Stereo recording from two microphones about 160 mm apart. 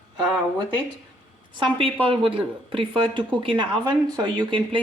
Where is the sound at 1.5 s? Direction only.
30° right (ahead or behind).